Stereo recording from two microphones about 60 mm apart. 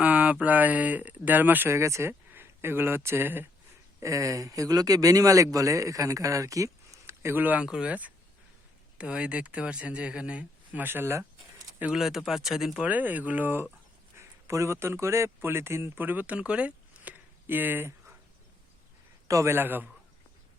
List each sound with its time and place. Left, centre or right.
0.0 s speech: right
1.7 s speech: right
2.3 s speech: right
4.0 s speech: right
7.3 s speech: right
7.6 s speech: centre
9.0 s speech: centre
10.8 s speech: right
11.9 s speech: centre
12.8 s speech: right
14.2 s speech: right
19.5 s a man's voice: right